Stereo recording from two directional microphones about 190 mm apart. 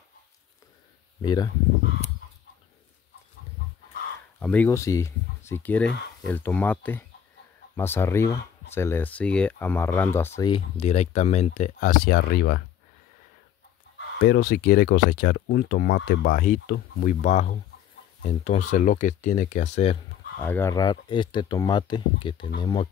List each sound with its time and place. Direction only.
1.2 s speech: 20° left (ahead or behind)
4.4 s speech: 10° left (ahead or behind)
10.5 s speech: 35° left (ahead or behind); by 12.6 s 60° left (ahead or behind)
13.9 s speech: 55° left (ahead or behind); by 20.0 s 35° left (ahead or behind)
20.4 s speech: 10° left (ahead or behind)